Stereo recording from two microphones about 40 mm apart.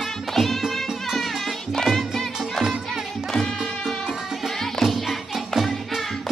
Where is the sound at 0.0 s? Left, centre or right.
Centre.